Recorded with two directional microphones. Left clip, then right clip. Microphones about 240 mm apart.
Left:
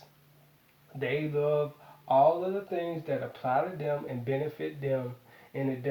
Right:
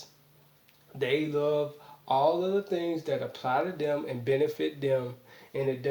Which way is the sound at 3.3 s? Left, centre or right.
Right.